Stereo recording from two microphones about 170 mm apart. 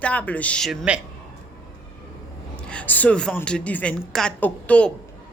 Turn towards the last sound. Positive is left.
turn(degrees=10)  # may be behind; listen again after turning